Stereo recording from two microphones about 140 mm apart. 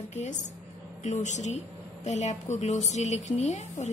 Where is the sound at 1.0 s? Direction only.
55° left (ahead or behind).